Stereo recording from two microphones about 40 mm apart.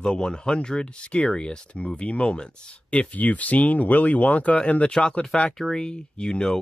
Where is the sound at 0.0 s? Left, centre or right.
Left.